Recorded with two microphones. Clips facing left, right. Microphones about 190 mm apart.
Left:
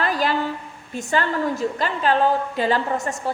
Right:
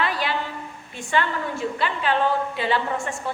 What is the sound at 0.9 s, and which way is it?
A woman's voice, 40° left (ahead or behind).